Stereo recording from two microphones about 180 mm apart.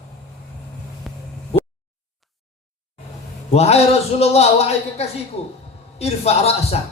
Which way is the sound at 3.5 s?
35° left (ahead or behind).